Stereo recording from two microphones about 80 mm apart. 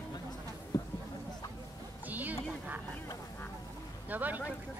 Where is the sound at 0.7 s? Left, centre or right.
Left.